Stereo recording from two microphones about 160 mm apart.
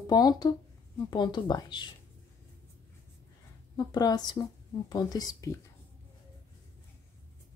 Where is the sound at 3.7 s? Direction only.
25° left (ahead or behind).